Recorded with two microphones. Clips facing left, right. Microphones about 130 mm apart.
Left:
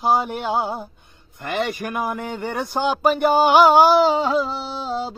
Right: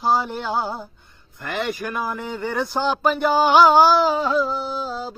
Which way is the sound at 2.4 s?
10° left (ahead or behind).